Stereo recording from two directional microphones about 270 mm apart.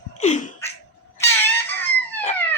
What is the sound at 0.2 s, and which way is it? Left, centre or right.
Speech, left.